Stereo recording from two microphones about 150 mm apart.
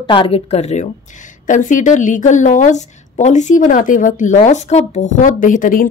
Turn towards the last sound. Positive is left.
turn(degrees=65)  # may be behind; listen again after turning